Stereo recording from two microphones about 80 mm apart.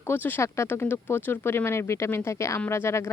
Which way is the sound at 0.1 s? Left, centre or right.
Left.